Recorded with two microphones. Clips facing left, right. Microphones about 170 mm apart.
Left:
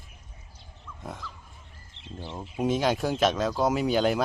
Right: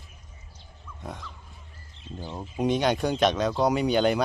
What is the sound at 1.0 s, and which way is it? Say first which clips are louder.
Speech: even; centre (ahead or behind).